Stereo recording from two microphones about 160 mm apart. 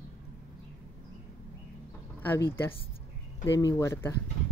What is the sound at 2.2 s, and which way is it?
Speech, 15° left (ahead or behind).